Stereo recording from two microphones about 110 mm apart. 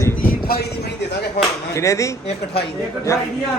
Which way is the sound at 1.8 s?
30° left (ahead or behind).